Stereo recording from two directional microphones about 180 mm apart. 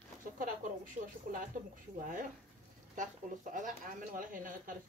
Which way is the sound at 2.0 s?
50° right (ahead or behind).